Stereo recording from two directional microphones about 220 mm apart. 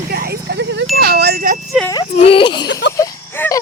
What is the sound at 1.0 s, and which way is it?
Wind chime, 45° right (ahead or behind).